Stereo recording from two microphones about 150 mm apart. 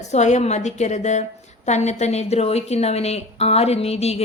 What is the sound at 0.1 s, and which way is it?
A woman's voice, 50° left (ahead or behind).